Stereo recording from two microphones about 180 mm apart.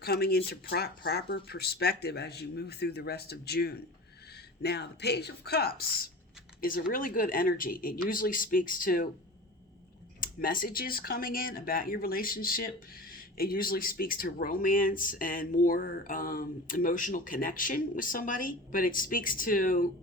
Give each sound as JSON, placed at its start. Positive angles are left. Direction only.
{"t": 0.0, "sound": "speech", "side_deg": 60}
{"t": 10.2, "sound": "speech", "side_deg": 50}